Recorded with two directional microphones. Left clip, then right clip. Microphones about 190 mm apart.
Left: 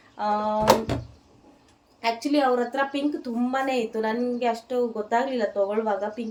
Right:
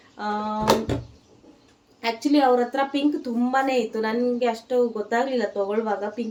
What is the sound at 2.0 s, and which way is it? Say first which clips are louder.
A woman's voice: right 2 dB; 5° right (ahead or behind).